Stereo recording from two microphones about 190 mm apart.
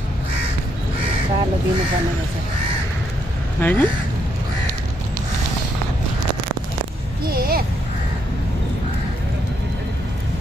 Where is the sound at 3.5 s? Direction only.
10° left (ahead or behind).